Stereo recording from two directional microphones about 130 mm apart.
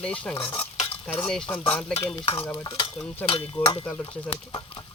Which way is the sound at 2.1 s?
40° left (ahead or behind).